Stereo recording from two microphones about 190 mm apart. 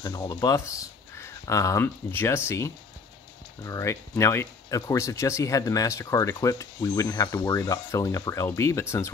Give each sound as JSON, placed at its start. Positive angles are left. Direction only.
{"t": 0.0, "sound": "speech", "side_deg": 20}